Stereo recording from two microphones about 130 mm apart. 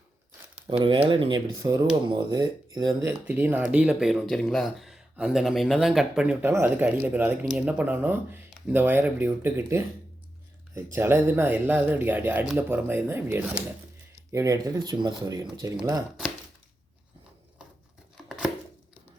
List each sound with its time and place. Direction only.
0.7 s speech: 45° right (ahead or behind)
1.5 s speech: 25° right (ahead or behind); by 6.3 s 5° right (ahead or behind)
6.4 s speech: 15° right (ahead or behind)
8.4 s a sound: centre (ahead or behind)
8.7 s speech: 15° right (ahead or behind)
10.9 s speech: 20° right (ahead or behind)
14.3 s speech: 25° right (ahead or behind)
18.3 s chopping: 5° right (ahead or behind)